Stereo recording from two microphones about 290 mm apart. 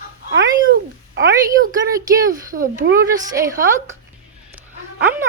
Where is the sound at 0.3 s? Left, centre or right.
Right.